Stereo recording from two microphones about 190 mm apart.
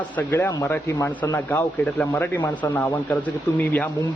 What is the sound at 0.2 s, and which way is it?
A man's voice, 10° left (ahead or behind).